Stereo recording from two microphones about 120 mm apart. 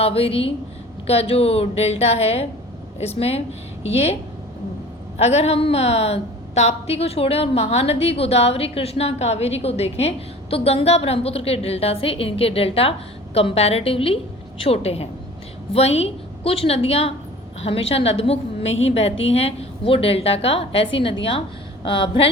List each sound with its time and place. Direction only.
0.0 s a woman's voice: 55° left (ahead or behind)